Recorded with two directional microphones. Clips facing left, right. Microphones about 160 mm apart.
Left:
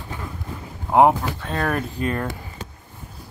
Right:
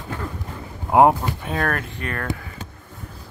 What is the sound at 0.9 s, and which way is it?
Speech, 5° right (ahead or behind).